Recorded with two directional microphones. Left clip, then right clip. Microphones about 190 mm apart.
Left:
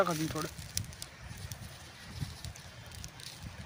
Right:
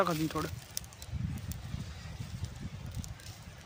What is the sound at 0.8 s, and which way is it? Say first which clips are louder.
Bird: left 4 dB; 45° right (ahead or behind).